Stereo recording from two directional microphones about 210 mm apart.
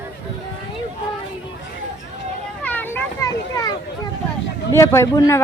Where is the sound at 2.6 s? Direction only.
10° left (ahead or behind).